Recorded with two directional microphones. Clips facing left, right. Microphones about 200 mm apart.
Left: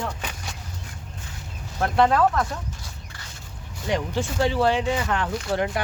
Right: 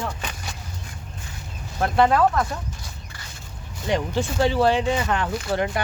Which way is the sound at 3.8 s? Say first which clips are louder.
Right 2 dB; 30° right (ahead or behind).